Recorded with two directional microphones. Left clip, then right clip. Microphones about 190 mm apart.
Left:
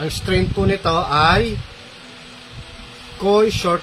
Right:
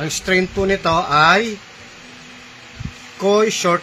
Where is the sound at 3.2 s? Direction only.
20° right (ahead or behind).